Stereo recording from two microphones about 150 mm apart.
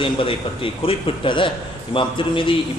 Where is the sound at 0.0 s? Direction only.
35° left (ahead or behind).